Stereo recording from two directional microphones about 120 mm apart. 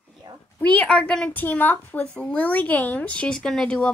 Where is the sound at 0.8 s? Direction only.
5° left (ahead or behind).